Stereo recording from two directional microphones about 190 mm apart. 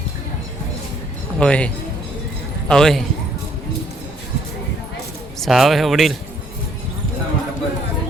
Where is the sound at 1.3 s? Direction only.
5° left (ahead or behind).